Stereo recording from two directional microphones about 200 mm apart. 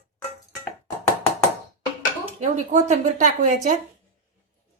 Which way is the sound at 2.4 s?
35° right (ahead or behind).